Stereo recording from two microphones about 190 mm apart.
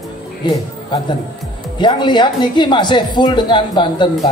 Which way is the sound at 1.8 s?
25° left (ahead or behind).